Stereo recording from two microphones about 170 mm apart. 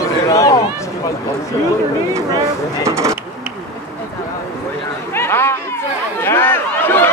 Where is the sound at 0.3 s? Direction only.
20° left (ahead or behind).